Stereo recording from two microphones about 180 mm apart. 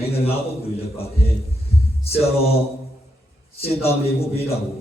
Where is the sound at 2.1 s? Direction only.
35° left (ahead or behind).